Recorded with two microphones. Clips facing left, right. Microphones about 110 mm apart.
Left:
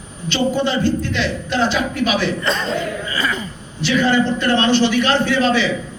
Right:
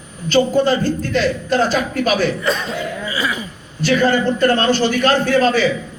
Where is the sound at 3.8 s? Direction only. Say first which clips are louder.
Right 1 dB; 45° right (ahead or behind).